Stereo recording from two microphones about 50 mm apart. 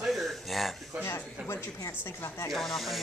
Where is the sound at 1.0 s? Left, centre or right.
Left.